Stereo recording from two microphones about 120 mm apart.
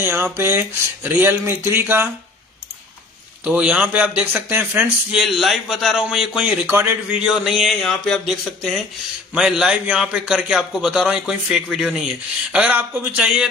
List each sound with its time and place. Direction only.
0.0 s speech: 20° right (ahead or behind)
3.4 s a man's voice: 10° right (ahead or behind)
5.1 s a man's voice: centre (ahead or behind)